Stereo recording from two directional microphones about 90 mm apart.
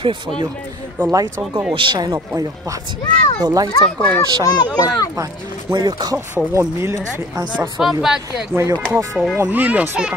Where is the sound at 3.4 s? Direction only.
45° right (ahead or behind).